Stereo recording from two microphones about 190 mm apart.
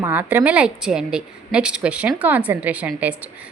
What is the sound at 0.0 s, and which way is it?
A woman's voice, 10° right (ahead or behind).